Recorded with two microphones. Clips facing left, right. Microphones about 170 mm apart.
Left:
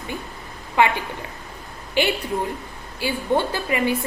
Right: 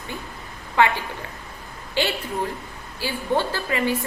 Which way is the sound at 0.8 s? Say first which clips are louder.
Left 1 dB; 15° left (ahead or behind).